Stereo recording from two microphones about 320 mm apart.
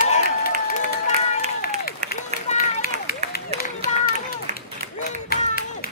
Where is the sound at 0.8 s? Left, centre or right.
Left.